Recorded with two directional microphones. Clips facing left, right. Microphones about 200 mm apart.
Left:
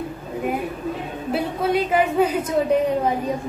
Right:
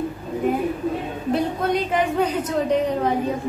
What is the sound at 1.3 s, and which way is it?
A woman's voice, 5° left (ahead or behind).